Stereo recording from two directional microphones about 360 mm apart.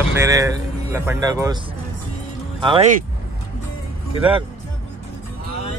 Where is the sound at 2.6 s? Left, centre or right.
Centre.